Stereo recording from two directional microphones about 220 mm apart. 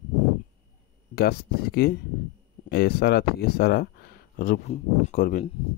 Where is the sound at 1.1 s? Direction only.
45° left (ahead or behind).